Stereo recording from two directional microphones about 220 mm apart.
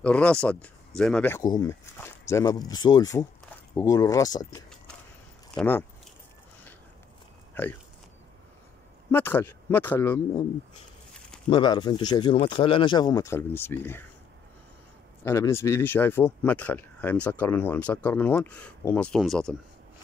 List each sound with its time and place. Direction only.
0.0 s speech: 5° left (ahead or behind)
5.5 s speech: 5° left (ahead or behind)
7.6 s speech: 10° left (ahead or behind)
9.1 s speech: 10° left (ahead or behind)
11.5 s speech: 20° left (ahead or behind)
15.2 s speech: 10° left (ahead or behind)